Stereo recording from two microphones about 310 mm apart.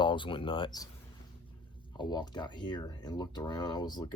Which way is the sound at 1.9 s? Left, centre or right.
Centre.